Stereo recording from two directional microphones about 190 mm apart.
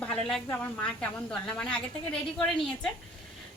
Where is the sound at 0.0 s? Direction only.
5° left (ahead or behind).